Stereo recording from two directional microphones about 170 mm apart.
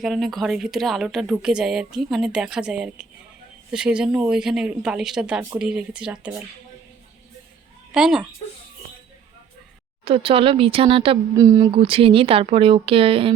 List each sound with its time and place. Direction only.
0.0 s a woman's voice: centre (ahead or behind)
7.9 s a woman's voice: 5° right (ahead or behind)
10.0 s speech: 35° right (ahead or behind)
11.3 s speech: 20° right (ahead or behind)
11.7 s speech: 30° right (ahead or behind)